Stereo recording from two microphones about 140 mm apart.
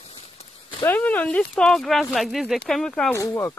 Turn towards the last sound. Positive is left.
turn(degrees=20)  # may be behind; listen again after turning